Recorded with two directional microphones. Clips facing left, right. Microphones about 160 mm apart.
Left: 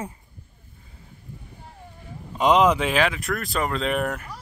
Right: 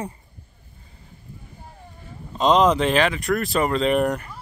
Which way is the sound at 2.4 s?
10° left (ahead or behind).